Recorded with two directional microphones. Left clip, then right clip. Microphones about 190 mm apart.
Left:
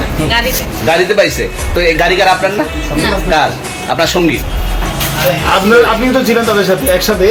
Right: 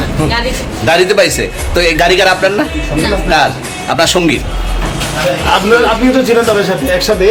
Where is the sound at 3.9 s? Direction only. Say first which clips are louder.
Right 1 dB; 30° right (ahead or behind).